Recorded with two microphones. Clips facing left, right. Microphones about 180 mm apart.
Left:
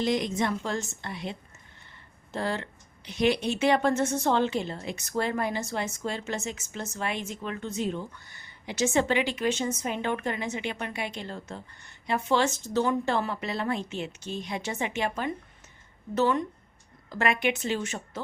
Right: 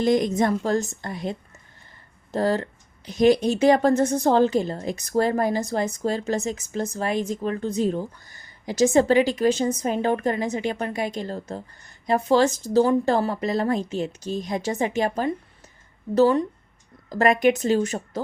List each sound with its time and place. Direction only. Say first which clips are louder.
0.0 s a woman's voice: right 7 dB; 45° right (ahead or behind)